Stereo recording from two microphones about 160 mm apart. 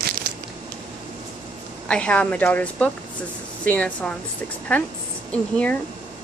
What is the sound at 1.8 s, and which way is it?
A woman's voice, 5° left (ahead or behind).